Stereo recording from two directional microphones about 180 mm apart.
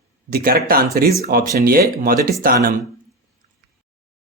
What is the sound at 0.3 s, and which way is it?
Speech, 55° right (ahead or behind).